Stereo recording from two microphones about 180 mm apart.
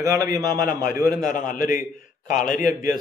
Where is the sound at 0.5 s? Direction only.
50° left (ahead or behind).